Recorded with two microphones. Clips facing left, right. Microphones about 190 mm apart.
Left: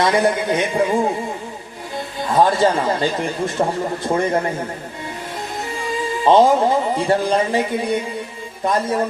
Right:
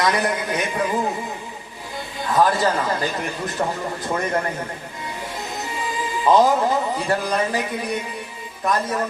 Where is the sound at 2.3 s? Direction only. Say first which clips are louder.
Left 3 dB; 25° left (ahead or behind).